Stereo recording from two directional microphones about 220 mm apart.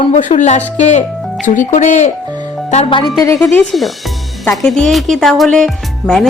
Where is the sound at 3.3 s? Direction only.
Centre (ahead or behind).